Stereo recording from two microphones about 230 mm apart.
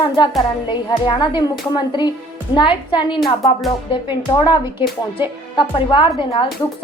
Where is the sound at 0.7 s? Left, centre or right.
Centre.